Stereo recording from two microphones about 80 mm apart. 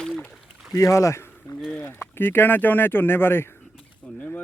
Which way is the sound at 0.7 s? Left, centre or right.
Left.